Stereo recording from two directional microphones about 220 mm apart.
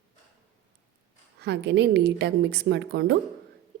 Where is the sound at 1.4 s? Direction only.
50° right (ahead or behind).